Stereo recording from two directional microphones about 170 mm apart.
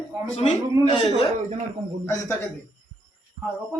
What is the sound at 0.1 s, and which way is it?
Speech, 10° right (ahead or behind).